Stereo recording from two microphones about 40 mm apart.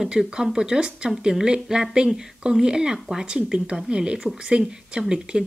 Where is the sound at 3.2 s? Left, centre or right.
Right.